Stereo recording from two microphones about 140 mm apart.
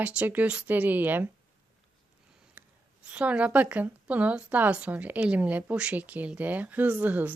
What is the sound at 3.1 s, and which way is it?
A woman's voice, 10° right (ahead or behind).